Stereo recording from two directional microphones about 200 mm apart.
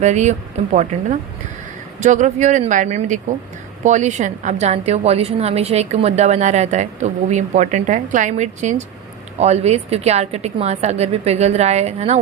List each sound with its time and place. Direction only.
0.0 s a woman's voice: 35° right (ahead or behind)